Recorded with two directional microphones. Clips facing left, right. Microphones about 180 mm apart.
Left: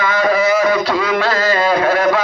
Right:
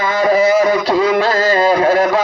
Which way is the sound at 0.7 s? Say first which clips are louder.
Right 2 dB; 45° right (ahead or behind).